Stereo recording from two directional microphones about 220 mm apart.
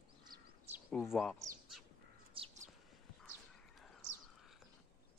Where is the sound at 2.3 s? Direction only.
30° right (ahead or behind).